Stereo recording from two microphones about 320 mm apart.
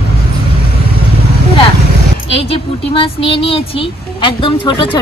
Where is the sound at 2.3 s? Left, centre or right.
Centre.